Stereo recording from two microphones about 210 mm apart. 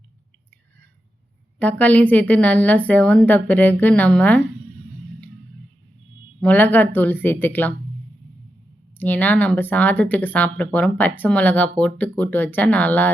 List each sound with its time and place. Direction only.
1.5 s a woman's voice: 5° left (ahead or behind)
6.4 s a woman's voice: 10° left (ahead or behind)
9.0 s a woman's voice: 10° left (ahead or behind)